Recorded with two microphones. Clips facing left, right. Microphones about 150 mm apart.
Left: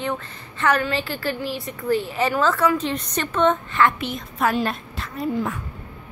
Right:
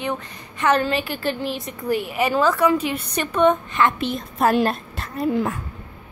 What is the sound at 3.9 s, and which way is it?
A woman's voice, 30° right (ahead or behind).